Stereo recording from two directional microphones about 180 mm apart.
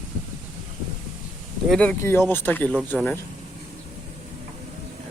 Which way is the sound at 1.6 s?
5° left (ahead or behind).